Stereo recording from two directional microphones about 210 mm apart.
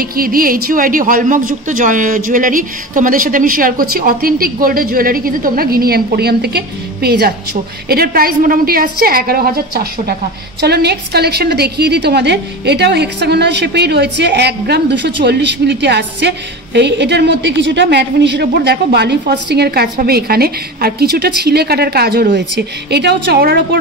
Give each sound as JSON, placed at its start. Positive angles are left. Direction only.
{"t": 0.0, "sound": "a woman's voice", "side_deg": -45}